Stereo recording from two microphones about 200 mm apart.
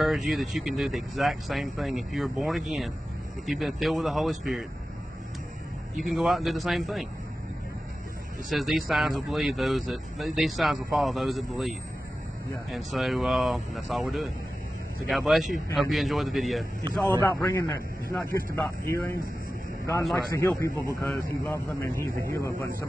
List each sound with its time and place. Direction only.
0.0 s speech: centre (ahead or behind)
5.9 s speech: centre (ahead or behind)
8.5 s speech: centre (ahead or behind)
12.7 s speech: centre (ahead or behind)
15.0 s speech: centre (ahead or behind)
16.8 s speech: 15° right (ahead or behind)
17.2 s speech: 10° left (ahead or behind)
20.2 s speech: 15° left (ahead or behind)